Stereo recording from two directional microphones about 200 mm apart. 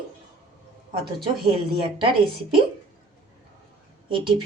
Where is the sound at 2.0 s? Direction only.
25° right (ahead or behind).